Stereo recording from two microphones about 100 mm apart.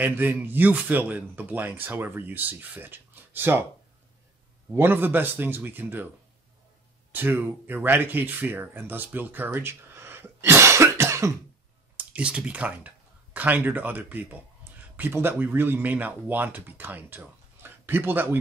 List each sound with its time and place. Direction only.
0.0 s speech: 20° right (ahead or behind)
4.7 s speech: 20° right (ahead or behind)
7.1 s speech: 20° right (ahead or behind)
12.0 s speech: 10° right (ahead or behind)